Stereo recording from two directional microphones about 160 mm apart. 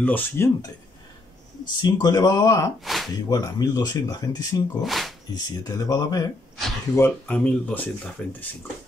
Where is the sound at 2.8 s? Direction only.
Centre (ahead or behind).